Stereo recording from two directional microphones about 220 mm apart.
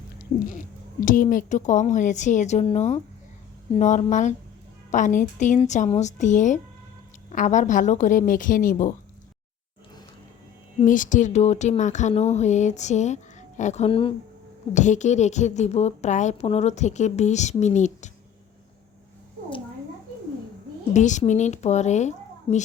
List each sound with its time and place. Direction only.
0.4 s a woman's voice: 35° left (ahead or behind)
10.8 s a woman's voice: 35° left (ahead or behind)
20.9 s a woman's voice: 35° left (ahead or behind)